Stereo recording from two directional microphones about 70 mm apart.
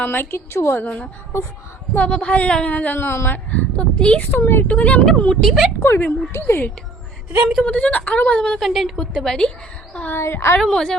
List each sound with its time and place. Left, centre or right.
0.0 s a woman's voice: left
0.9 s a woman's voice: centre
4.3 s a woman's voice: left
4.7 s a woman's voice: centre
5.3 s a woman's voice: centre
5.8 s a woman's voice: left
7.6 s a woman's voice: centre
8.5 s a woman's voice: centre
10.1 s a woman's voice: left
10.6 s speech: centre